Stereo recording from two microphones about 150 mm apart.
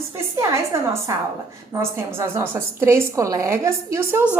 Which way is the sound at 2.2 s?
15° right (ahead or behind).